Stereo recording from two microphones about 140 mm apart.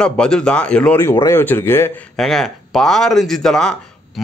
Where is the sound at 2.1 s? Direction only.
5° left (ahead or behind).